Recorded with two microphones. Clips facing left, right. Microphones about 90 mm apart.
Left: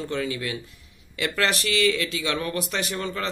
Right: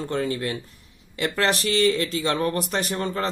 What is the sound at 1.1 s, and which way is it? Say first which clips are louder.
Speech: right 2 dB; 30° right (ahead or behind).